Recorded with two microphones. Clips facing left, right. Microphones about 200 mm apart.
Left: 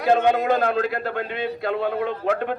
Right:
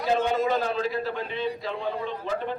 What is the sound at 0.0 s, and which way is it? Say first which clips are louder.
A man's voice: left 5 dB; 60° left (ahead or behind).